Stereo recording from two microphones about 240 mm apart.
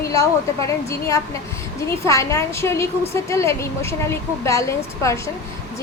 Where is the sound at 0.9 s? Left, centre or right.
Centre.